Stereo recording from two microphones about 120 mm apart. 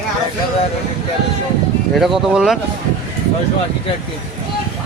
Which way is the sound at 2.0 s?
Centre (ahead or behind).